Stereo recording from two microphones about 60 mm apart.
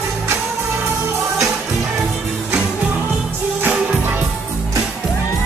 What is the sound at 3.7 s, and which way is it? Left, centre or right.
Music, right.